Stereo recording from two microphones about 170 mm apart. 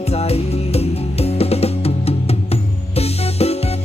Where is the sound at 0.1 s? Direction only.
35° left (ahead or behind).